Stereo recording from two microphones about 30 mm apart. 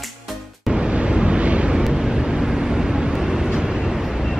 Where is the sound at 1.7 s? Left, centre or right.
Centre.